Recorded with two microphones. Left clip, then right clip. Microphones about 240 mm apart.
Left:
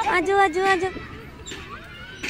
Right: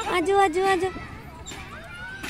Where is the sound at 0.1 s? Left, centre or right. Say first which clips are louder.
Even; centre.